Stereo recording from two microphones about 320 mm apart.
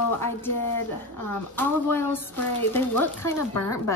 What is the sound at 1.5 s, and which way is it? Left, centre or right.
Speech, centre.